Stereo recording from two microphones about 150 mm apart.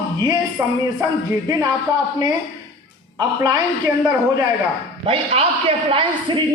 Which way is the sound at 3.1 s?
25° right (ahead or behind).